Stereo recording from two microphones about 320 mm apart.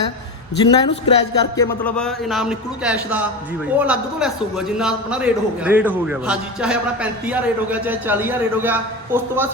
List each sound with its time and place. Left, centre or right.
0.6 s a man's voice: centre